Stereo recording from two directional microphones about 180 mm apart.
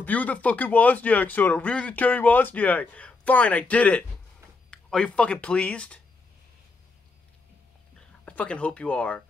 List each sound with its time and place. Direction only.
0.0 s speech: 10° left (ahead or behind)
8.0 s speech: 5° left (ahead or behind)